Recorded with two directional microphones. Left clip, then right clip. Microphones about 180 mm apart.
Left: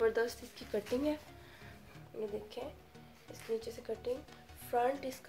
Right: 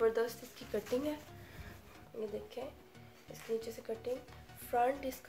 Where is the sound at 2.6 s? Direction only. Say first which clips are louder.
Right 1 dB; 35° left (ahead or behind).